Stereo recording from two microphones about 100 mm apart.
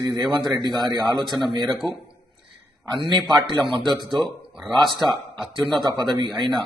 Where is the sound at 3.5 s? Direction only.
55° right (ahead or behind).